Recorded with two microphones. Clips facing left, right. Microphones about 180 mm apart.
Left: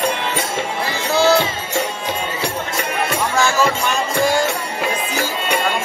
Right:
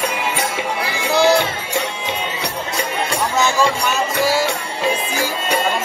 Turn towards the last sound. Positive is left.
turn(degrees=-5)  # may be behind; listen again after turning